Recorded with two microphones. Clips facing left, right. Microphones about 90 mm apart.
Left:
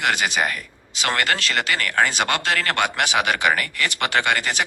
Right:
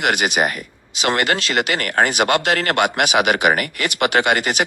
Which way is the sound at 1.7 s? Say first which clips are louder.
Right 1 dB; 60° right (ahead or behind).